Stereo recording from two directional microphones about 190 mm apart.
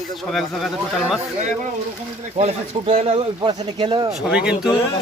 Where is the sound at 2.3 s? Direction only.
35° right (ahead or behind).